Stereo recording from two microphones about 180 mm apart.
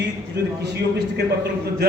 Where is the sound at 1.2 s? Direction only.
65° right (ahead or behind).